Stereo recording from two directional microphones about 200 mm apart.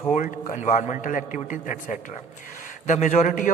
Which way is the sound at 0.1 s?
35° left (ahead or behind).